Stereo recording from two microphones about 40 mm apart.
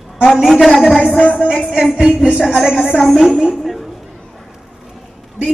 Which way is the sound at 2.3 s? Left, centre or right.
Centre.